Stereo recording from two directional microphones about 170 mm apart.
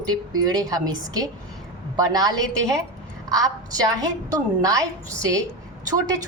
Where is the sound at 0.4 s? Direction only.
20° right (ahead or behind).